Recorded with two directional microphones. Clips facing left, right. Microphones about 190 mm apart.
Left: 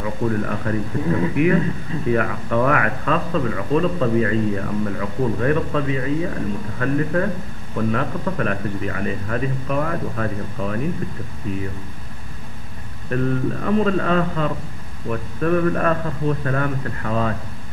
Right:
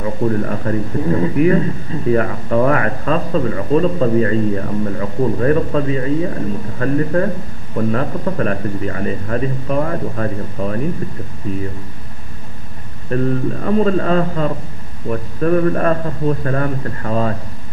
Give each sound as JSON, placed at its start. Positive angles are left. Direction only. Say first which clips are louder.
{"t": 0.0, "sound": "speech", "louder": "right 4 dB", "side_deg": -35}
{"t": 13.1, "sound": "speech", "louder": "right 3 dB", "side_deg": -35}